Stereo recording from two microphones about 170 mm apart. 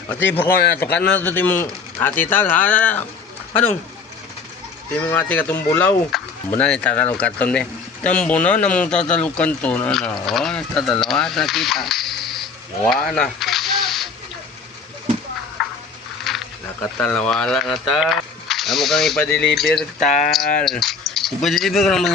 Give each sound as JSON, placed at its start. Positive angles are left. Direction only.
{"t": 0.1, "sound": "speech", "side_deg": 10}
{"t": 4.9, "sound": "speech", "side_deg": 10}
{"t": 6.1, "sound": "speech", "side_deg": 0}
{"t": 12.9, "sound": "a sound", "side_deg": 0}
{"t": 15.6, "sound": "a sound", "side_deg": 0}
{"t": 16.8, "sound": "speech", "side_deg": 10}
{"t": 20.1, "sound": "speech", "side_deg": 45}
{"t": 20.7, "sound": "speech", "side_deg": 0}